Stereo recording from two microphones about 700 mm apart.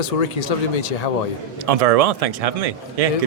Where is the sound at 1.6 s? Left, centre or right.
Right.